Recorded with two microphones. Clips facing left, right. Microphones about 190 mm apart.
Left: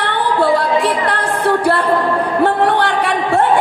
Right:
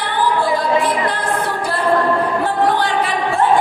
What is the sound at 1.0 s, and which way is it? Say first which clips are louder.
Music: left 3 dB; 65° left (ahead or behind).